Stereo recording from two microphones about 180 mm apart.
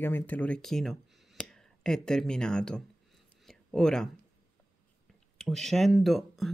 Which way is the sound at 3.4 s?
5° left (ahead or behind).